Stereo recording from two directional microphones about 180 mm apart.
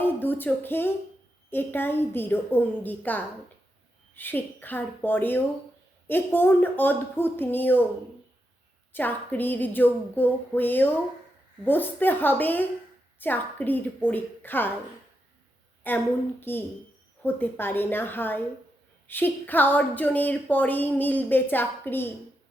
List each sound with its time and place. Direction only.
0.0 s music: 10° left (ahead or behind)
1.5 s a woman's voice: 10° left (ahead or behind)
8.9 s a woman's voice: 10° left (ahead or behind)
15.9 s a woman's voice: 10° left (ahead or behind)